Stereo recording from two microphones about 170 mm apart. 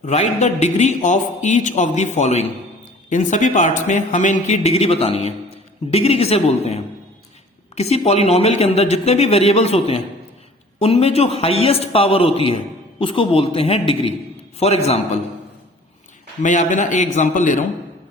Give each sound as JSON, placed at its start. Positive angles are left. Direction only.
{"t": 0.0, "sound": "a man's voice", "side_deg": 40}
{"t": 16.4, "sound": "a man's voice", "side_deg": 45}